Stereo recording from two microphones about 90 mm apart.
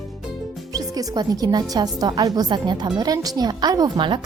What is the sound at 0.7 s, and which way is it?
A woman's voice, 45° right (ahead or behind).